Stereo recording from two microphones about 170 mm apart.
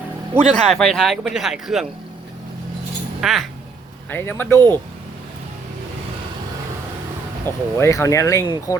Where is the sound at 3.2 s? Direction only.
Centre (ahead or behind).